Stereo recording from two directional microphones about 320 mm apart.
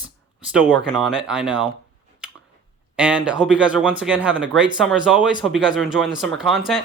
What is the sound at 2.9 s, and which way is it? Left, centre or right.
Speech, centre.